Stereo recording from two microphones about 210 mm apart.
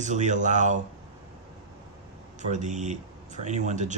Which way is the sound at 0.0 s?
35° right (ahead or behind).